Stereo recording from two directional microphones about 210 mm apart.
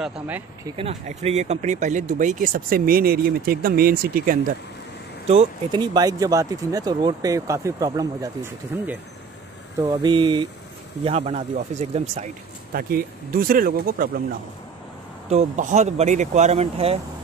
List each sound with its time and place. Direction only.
0.7 s speech: 30° right (ahead or behind)
5.3 s speech: 25° right (ahead or behind)
12.7 s speech: 45° right (ahead or behind)
15.2 s speech: 35° right (ahead or behind)